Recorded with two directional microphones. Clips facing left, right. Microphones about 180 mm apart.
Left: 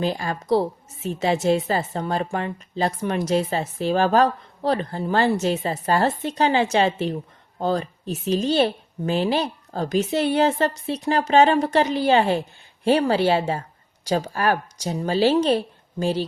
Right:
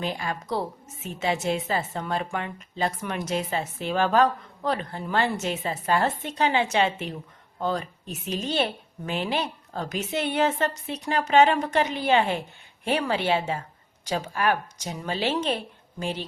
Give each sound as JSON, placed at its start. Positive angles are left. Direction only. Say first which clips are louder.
{"t": 0.0, "sound": "a woman's voice", "louder": "left 5 dB", "side_deg": 35}